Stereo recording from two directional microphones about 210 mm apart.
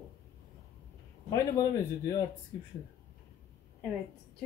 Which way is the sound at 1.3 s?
15° left (ahead or behind).